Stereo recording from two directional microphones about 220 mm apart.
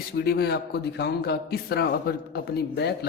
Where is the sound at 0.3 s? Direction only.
45° left (ahead or behind).